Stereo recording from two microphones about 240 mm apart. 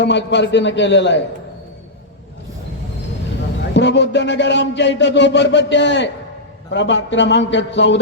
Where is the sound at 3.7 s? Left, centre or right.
Left.